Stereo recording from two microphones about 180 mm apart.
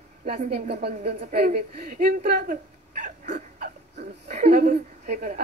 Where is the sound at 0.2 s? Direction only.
55° right (ahead or behind).